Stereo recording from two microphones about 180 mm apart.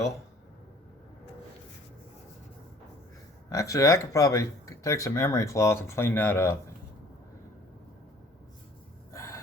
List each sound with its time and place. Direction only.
3.5 s speech: 20° left (ahead or behind)
9.1 s gasp: 15° left (ahead or behind)